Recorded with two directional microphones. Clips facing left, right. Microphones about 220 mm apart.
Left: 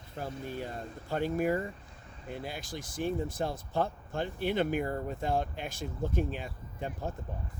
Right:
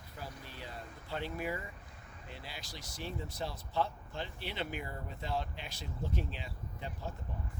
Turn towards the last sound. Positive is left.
turn(degrees=50)  # may be behind; listen again after turning